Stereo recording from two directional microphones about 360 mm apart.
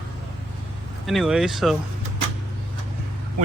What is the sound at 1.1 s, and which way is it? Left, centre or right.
Speech, centre.